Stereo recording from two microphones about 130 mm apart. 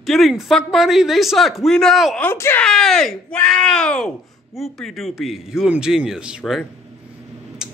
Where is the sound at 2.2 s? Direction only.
15° left (ahead or behind).